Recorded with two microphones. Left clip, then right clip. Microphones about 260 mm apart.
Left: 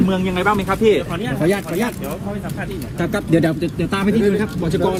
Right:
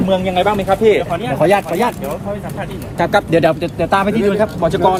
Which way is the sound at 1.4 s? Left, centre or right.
Right.